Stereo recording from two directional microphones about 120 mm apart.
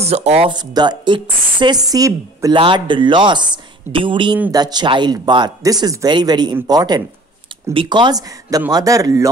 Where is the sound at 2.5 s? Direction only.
45° right (ahead or behind).